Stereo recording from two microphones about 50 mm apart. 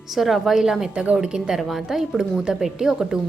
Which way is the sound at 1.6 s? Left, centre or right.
Centre.